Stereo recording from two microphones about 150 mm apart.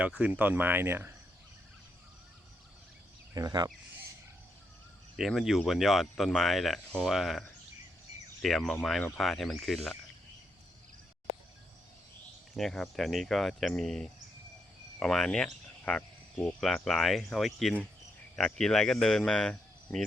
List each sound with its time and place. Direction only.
0.0 s speech: 5° right (ahead or behind)
3.3 s speech: 25° right (ahead or behind)
5.1 s speech: centre (ahead or behind)
12.5 s speech: centre (ahead or behind)